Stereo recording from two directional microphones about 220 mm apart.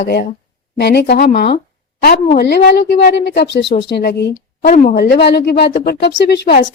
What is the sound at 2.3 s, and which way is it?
A woman's voice, 45° left (ahead or behind).